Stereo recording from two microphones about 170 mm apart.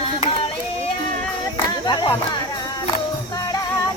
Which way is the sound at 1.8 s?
25° left (ahead or behind).